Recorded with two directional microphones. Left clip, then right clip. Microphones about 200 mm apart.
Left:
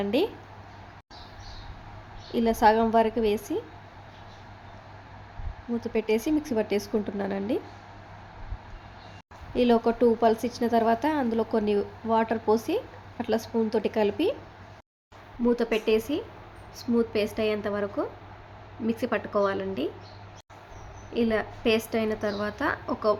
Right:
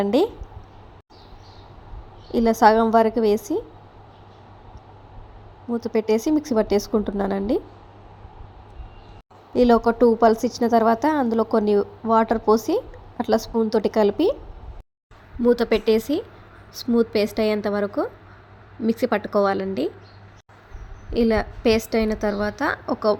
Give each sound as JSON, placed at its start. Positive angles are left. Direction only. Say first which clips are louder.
{"t": 0.0, "sound": "speech", "louder": "right 6 dB", "side_deg": -30}
{"t": 2.3, "sound": "a woman's voice", "louder": "right 5 dB", "side_deg": -30}
{"t": 5.8, "sound": "a woman's voice", "louder": "right 5 dB", "side_deg": -30}
{"t": 9.6, "sound": "a woman's voice", "louder": "right 6 dB", "side_deg": -30}
{"t": 15.4, "sound": "a woman's voice", "louder": "right 6 dB", "side_deg": -30}
{"t": 21.1, "sound": "a woman's voice", "louder": "right 6 dB", "side_deg": -25}